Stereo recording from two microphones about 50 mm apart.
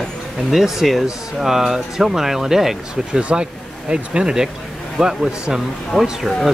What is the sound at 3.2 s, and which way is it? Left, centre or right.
Speech, right.